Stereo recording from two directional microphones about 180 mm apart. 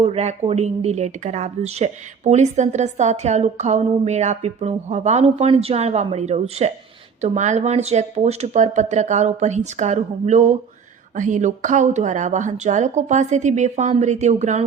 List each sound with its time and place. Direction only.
0.0 s speech: 35° right (ahead or behind)